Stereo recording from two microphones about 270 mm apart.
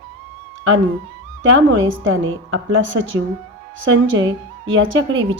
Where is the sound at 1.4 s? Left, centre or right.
Right.